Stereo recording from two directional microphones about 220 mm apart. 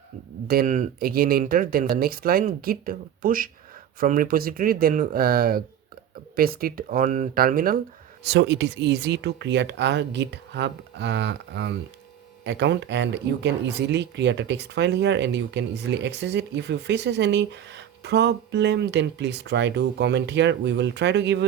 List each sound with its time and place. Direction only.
0.4 s speech: 40° right (ahead or behind)
8.2 s speech: 50° right (ahead or behind)